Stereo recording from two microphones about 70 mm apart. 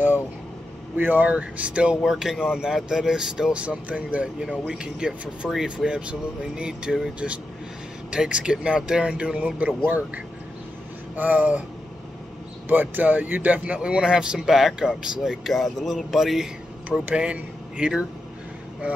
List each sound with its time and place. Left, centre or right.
0.9 s speech: right
2.0 s speech: centre
3.6 s speech: centre
5.9 s speech: centre
12.6 s speech: right; by 16.4 s centre
17.1 s speech: centre